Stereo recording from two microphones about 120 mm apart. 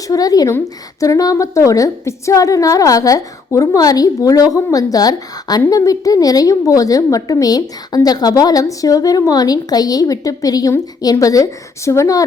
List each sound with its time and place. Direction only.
0.1 s a woman's voice: 30° left (ahead or behind)